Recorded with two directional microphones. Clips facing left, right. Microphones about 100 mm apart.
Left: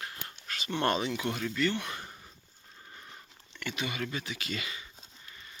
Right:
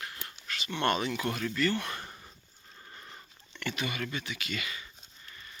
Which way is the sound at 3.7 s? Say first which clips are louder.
Even; 20° left (ahead or behind).